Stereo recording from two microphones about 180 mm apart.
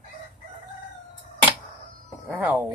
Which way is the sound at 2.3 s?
10° right (ahead or behind).